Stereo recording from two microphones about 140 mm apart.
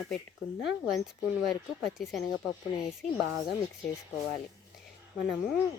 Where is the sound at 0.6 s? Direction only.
Centre (ahead or behind).